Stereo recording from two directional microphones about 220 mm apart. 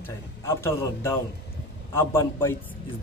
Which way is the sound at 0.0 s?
10° left (ahead or behind).